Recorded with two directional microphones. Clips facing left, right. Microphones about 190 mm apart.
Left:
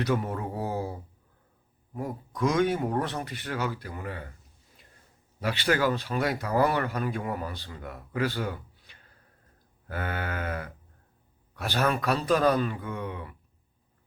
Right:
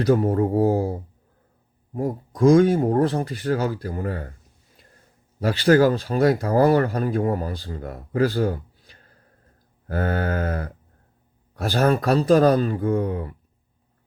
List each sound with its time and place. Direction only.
0.0 s speech: 35° right (ahead or behind)
5.4 s speech: 35° right (ahead or behind)